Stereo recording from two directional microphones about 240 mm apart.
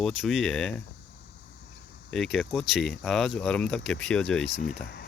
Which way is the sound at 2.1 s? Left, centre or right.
Centre.